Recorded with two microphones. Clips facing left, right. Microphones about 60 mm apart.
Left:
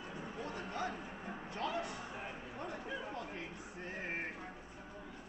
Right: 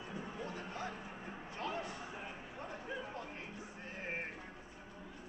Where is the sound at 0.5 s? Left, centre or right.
Left.